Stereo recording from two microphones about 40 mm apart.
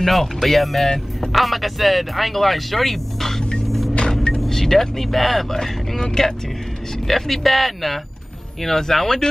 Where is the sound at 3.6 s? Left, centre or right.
Centre.